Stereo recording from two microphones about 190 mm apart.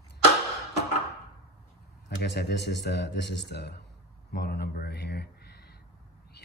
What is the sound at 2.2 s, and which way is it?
A man's voice, 60° left (ahead or behind).